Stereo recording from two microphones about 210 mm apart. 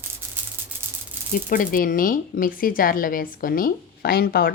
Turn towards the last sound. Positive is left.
turn(degrees=45)  # may be behind; listen again after turning